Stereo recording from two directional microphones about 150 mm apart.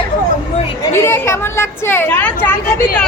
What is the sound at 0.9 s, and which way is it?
Speech, 15° left (ahead or behind).